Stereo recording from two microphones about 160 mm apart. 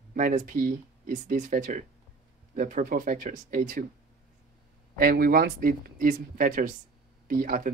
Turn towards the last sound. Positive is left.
turn(degrees=-60)  # may be behind; listen again after turning